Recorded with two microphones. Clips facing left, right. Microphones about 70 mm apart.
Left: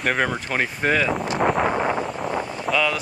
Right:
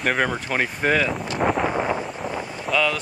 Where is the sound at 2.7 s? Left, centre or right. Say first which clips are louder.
Even; centre.